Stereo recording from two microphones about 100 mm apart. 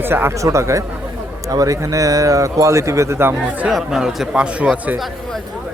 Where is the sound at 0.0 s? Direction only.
20° right (ahead or behind).